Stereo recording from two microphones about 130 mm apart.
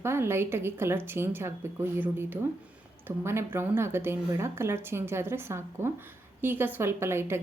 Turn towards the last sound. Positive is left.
turn(degrees=-20)  # may be behind; listen again after turning